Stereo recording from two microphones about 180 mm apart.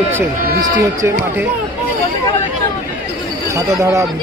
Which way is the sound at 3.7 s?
15° right (ahead or behind).